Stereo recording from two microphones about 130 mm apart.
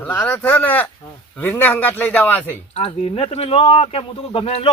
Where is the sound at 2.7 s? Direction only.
50° left (ahead or behind).